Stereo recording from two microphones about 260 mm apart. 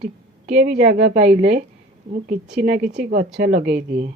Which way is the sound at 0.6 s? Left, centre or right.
Right.